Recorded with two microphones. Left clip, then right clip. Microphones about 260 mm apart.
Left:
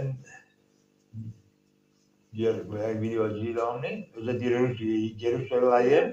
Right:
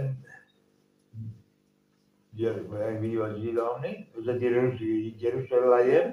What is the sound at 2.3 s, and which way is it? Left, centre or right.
A man's voice, left.